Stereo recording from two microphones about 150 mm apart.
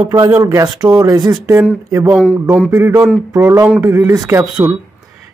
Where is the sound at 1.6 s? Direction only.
15° right (ahead or behind).